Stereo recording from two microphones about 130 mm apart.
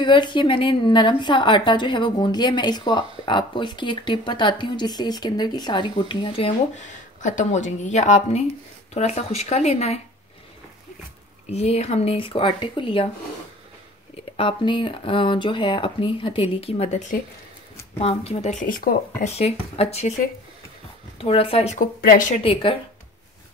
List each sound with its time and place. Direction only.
0.0 s a woman's voice: 35° left (ahead or behind)
6.8 s speech: 75° left (ahead or behind); by 9.9 s 55° left (ahead or behind)
11.5 s speech: 55° left (ahead or behind)
14.3 s a woman's voice: 40° left (ahead or behind); by 17.2 s 65° left (ahead or behind)
17.9 s speech: 50° left (ahead or behind); by 19.3 s 90° left
19.3 s speech: 50° left (ahead or behind)
21.2 s speech: 45° left (ahead or behind)